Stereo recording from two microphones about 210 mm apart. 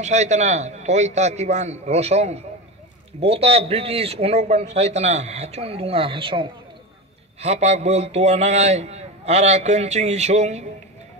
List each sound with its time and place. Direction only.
0.0 s a man's voice: 35° right (ahead or behind)